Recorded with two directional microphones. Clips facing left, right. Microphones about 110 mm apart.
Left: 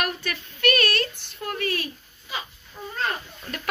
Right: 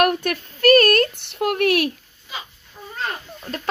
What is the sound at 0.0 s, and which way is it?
Child singing, 55° right (ahead or behind).